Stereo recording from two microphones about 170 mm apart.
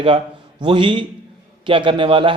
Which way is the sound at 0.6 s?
30° right (ahead or behind).